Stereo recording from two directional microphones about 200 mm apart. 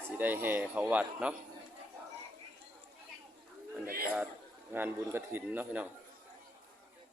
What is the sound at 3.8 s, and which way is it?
Speech, 45° right (ahead or behind).